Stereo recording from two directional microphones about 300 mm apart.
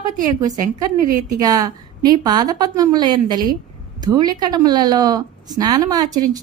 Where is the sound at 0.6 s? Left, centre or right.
Right.